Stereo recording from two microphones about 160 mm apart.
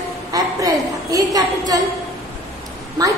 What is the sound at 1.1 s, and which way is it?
Speech, 20° right (ahead or behind).